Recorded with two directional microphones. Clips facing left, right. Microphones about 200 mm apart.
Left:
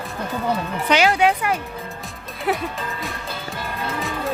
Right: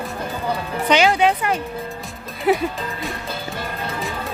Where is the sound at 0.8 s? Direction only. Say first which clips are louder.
Right 1 dB; 5° left (ahead or behind).